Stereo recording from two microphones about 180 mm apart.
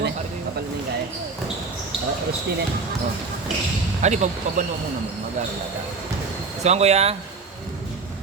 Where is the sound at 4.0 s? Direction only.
40° right (ahead or behind).